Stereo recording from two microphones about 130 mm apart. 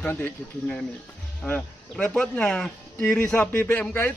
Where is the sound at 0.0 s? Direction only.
15° left (ahead or behind).